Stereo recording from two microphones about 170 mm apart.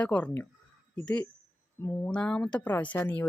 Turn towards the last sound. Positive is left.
turn(degrees=10)  # may be behind; listen again after turning